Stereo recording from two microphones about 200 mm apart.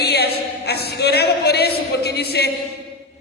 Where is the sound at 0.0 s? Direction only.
55° left (ahead or behind).